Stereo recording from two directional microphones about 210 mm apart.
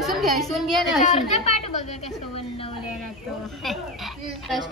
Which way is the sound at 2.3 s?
25° left (ahead or behind).